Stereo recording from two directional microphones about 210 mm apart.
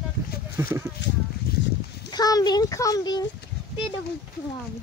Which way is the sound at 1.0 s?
55° left (ahead or behind).